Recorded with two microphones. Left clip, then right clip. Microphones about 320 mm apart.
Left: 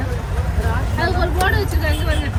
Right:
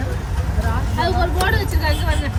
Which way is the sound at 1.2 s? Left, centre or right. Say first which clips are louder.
Left 1 dB; right.